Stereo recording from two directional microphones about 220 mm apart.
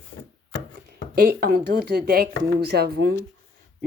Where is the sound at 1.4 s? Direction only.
45° right (ahead or behind).